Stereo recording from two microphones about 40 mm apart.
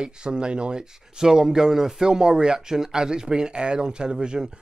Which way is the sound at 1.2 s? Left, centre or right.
Centre.